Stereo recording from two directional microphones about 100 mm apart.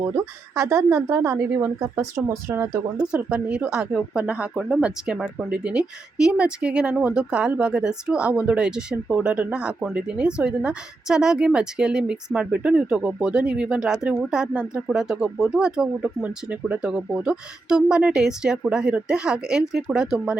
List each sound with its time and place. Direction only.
0.5 s a woman's voice: 25° right (ahead or behind)
3.1 s speech: 10° right (ahead or behind)